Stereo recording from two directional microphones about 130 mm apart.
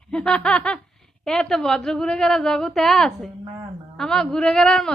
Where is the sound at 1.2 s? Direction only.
5° left (ahead or behind).